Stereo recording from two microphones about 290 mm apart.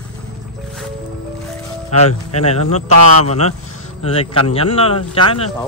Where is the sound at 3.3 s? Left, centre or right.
Left.